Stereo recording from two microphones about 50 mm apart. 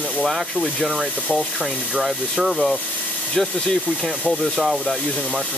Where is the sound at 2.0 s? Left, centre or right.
Centre.